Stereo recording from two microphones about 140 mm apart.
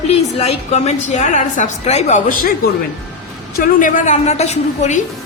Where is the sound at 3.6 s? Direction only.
70° left (ahead or behind); by 5.0 s 55° left (ahead or behind).